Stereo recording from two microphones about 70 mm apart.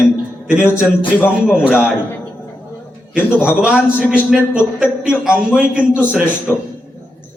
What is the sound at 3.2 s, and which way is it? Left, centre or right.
Speech, left.